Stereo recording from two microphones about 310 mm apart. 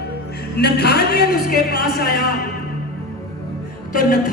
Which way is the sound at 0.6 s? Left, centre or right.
Left.